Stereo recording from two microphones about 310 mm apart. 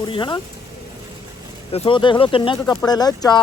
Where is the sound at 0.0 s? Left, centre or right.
Centre.